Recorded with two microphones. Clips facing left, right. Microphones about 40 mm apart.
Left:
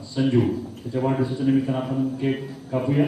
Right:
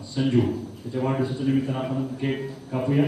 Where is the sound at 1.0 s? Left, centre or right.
Centre.